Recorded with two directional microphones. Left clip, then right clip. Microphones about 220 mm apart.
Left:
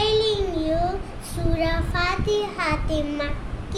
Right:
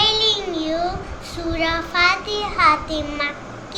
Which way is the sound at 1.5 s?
20° left (ahead or behind).